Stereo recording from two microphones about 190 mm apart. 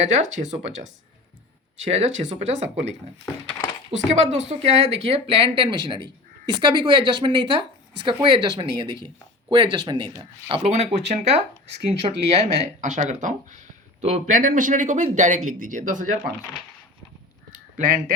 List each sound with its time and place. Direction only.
0.0 s speech: 40° right (ahead or behind)
3.9 s speech: 35° right (ahead or behind)
10.6 s speech: 35° right (ahead or behind)
17.5 s caw: 45° right (ahead or behind)